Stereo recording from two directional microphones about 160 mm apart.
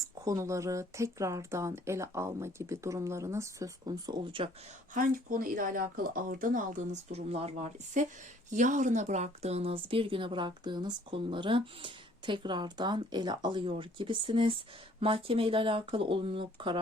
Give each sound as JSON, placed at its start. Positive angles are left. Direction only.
{"t": 0.3, "sound": "speech", "side_deg": -20}
{"t": 4.9, "sound": "a woman's voice", "side_deg": -60}